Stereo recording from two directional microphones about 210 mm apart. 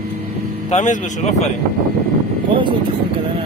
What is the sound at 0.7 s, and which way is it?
Speech, 35° left (ahead or behind).